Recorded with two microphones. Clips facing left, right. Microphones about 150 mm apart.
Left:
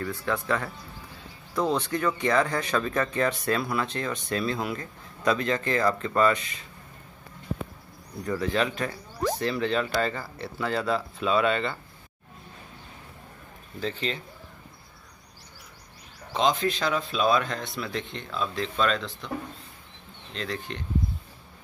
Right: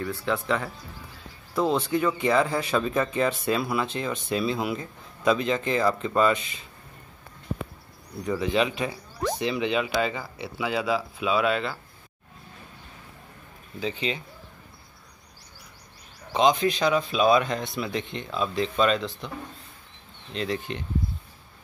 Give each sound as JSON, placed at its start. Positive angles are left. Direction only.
{"t": 0.2, "sound": "speech", "side_deg": -10}
{"t": 5.8, "sound": "speech", "side_deg": -5}
{"t": 6.1, "sound": "speech", "side_deg": -20}
{"t": 8.3, "sound": "speech", "side_deg": -10}
{"t": 13.7, "sound": "speech", "side_deg": -5}
{"t": 16.3, "sound": "speech", "side_deg": -5}
{"t": 17.3, "sound": "speech", "side_deg": -20}
{"t": 20.3, "sound": "speech", "side_deg": -10}